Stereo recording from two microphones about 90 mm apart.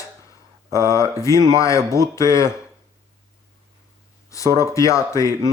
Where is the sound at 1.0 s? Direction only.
35° left (ahead or behind).